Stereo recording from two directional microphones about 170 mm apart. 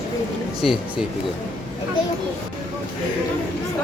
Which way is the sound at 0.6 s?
Centre (ahead or behind).